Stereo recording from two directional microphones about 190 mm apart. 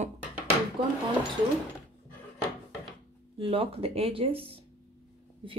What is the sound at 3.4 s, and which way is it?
A woman's voice, 30° right (ahead or behind).